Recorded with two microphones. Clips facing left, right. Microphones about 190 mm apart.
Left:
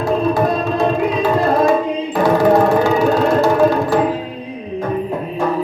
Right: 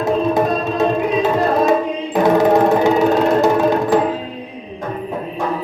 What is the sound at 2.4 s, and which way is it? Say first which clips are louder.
Music: even; 20° right (ahead or behind).